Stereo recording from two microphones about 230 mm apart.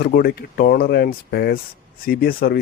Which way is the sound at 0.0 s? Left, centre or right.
Left.